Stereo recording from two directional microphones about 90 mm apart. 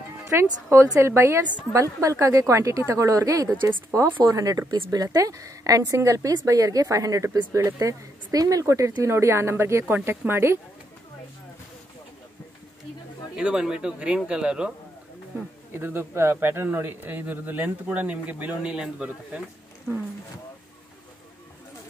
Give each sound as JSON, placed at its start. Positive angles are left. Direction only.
{"t": 0.3, "sound": "a woman's voice", "side_deg": -30}
{"t": 4.6, "sound": "speech", "side_deg": -70}
{"t": 4.9, "sound": "a woman's voice", "side_deg": -40}
{"t": 13.4, "sound": "speech", "side_deg": -10}
{"t": 15.7, "sound": "speech", "side_deg": -25}